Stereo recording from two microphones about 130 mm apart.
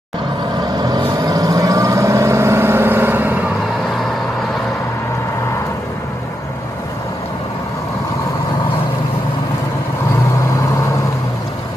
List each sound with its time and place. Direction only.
0.7 s vehicle: 30° right (ahead or behind); by 3.4 s 15° right (ahead or behind)